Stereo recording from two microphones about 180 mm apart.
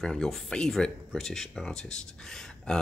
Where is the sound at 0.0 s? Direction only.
5° left (ahead or behind).